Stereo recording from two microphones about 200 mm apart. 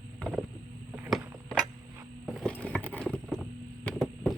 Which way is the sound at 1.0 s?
10° right (ahead or behind).